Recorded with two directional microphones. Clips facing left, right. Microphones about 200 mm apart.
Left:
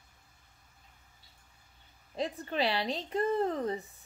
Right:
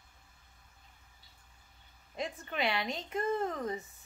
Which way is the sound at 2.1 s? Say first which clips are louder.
Left 4 dB; 35° left (ahead or behind).